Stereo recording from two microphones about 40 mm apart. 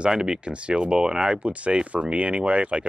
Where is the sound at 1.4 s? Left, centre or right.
Right.